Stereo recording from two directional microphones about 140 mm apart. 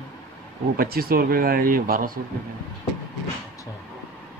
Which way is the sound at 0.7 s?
90° right.